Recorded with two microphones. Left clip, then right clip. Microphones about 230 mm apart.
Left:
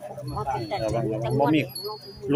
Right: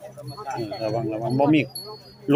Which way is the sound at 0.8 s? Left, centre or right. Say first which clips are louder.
Right 1 dB; centre.